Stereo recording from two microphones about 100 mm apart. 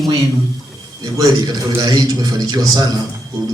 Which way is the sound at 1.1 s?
40° right (ahead or behind).